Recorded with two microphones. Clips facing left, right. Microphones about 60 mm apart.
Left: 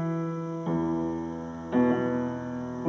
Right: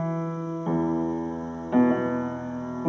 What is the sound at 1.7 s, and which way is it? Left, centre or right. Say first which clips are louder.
Music: right 3 dB; centre.